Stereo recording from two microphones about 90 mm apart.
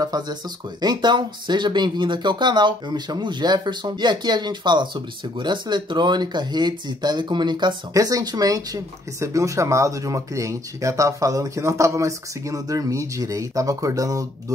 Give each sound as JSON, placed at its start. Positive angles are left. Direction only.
{"t": 0.0, "sound": "speech", "side_deg": -50}
{"t": 7.9, "sound": "speech", "side_deg": -45}